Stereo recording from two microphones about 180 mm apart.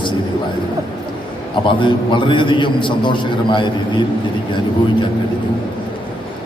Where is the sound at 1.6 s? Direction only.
25° left (ahead or behind).